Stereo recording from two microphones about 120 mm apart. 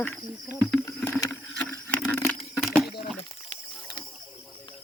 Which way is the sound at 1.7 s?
15° left (ahead or behind).